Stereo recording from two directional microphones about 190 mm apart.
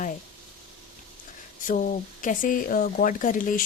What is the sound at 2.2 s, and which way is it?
A woman's voice, 45° left (ahead or behind).